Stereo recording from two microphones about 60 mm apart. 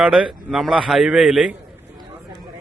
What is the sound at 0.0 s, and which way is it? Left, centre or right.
Speech, centre.